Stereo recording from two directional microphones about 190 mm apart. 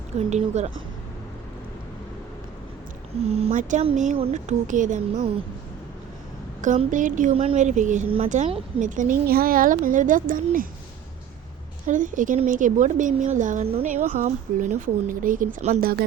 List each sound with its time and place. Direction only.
0.3 s a woman's voice: 35° right (ahead or behind)
3.2 s a woman's voice: 30° right (ahead or behind)
6.6 s a woman's voice: 40° right (ahead or behind)
11.9 s a woman's voice: 45° right (ahead or behind)